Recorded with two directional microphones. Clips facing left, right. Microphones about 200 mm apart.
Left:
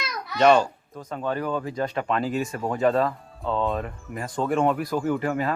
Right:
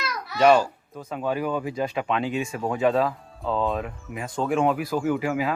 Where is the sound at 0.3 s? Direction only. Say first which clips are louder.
Even; 5° right (ahead or behind).